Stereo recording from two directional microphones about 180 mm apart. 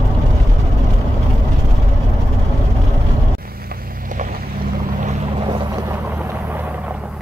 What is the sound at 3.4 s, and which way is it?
Boat, 55° right (ahead or behind).